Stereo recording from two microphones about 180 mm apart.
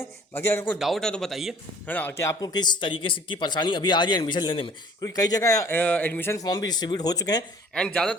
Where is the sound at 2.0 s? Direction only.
15° left (ahead or behind).